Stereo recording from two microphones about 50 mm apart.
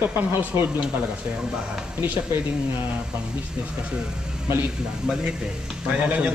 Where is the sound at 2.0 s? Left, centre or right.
Right.